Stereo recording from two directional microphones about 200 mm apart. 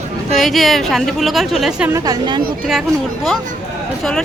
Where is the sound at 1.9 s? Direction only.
20° right (ahead or behind).